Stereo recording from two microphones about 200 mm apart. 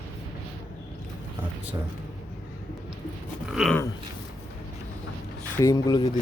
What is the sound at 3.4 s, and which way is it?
Speech, 5° right (ahead or behind).